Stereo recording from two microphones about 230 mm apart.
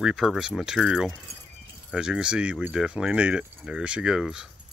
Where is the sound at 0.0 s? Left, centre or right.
Centre.